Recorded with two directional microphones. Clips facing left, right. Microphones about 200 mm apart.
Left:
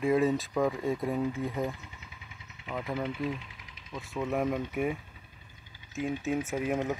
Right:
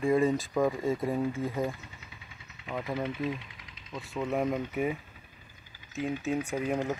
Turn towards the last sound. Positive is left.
turn(degrees=5)  # may be behind; listen again after turning